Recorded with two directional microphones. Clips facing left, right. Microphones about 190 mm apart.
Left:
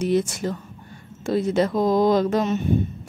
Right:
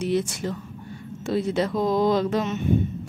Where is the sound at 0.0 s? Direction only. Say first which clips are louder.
Left 3 dB; 45° left (ahead or behind).